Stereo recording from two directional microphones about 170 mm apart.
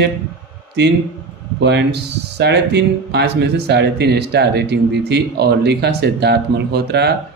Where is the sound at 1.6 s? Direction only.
90° right.